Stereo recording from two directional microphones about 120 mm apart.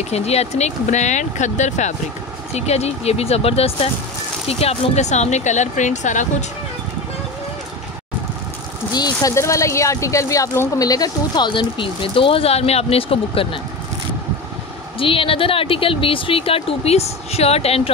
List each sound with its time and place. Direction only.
0.1 s speech: 60° left (ahead or behind); by 2.0 s 80° left
2.5 s speech: 60° left (ahead or behind); by 6.2 s 90° left
8.9 s speech: 35° left (ahead or behind); by 13.6 s 50° left (ahead or behind)
15.0 s speech: 50° left (ahead or behind)